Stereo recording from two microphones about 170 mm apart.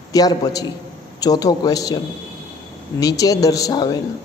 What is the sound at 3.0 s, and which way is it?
A man's voice, 20° left (ahead or behind).